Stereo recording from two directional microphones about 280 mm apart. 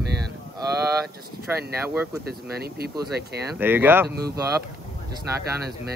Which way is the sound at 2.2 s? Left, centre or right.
Right.